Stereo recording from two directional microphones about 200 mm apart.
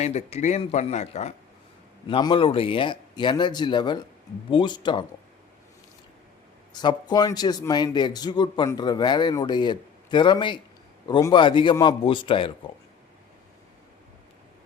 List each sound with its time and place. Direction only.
0.0 s a man's voice: 35° left (ahead or behind)
6.7 s a man's voice: 20° left (ahead or behind)